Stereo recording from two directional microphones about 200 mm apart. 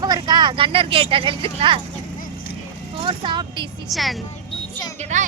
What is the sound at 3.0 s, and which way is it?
Speech, 25° right (ahead or behind).